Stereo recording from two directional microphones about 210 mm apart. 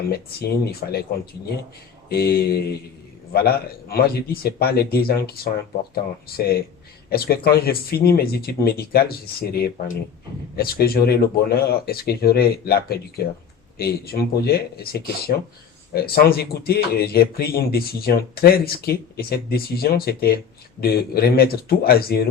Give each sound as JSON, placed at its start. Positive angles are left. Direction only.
{"t": 0.6, "sound": "speech", "side_deg": 45}